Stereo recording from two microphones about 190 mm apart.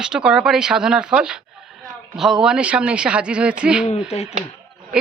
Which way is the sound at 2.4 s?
5° right (ahead or behind).